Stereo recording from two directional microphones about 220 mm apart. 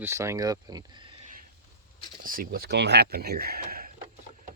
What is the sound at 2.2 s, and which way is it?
Speech, 40° right (ahead or behind).